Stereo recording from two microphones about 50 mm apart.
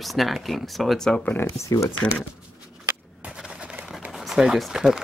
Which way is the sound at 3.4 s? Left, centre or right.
Centre.